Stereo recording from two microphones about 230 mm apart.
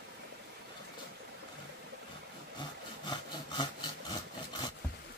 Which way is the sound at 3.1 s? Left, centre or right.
Centre.